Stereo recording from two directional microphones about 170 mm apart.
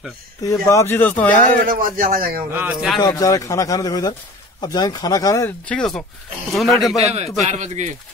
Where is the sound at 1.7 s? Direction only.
55° right (ahead or behind).